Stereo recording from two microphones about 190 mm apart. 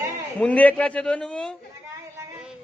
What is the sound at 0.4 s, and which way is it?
A man's voice, 10° left (ahead or behind).